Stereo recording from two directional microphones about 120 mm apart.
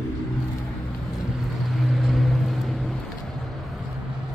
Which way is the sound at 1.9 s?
Centre (ahead or behind).